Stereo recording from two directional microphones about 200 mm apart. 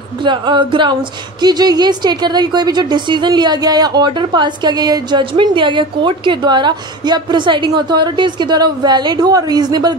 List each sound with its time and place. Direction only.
0.2 s a woman's voice: 25° right (ahead or behind)